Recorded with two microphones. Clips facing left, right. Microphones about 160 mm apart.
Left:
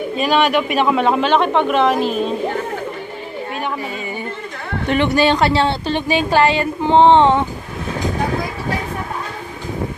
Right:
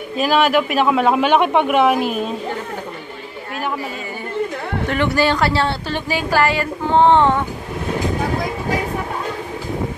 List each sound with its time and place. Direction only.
0.2 s a man's voice: centre (ahead or behind)
4.8 s a woman's voice: 20° left (ahead or behind)